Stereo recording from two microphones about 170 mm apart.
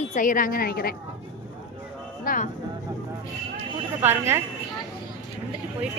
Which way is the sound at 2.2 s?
55° left (ahead or behind).